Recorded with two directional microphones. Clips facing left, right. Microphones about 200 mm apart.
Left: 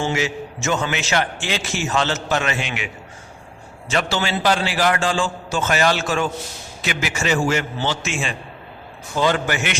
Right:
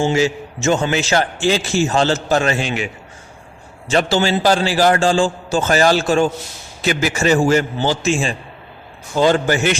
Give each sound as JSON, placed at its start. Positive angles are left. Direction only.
{"t": 0.0, "sound": "a man's voice", "side_deg": -30}